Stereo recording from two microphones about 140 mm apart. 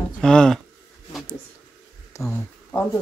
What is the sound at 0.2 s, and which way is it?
Speech, 5° left (ahead or behind).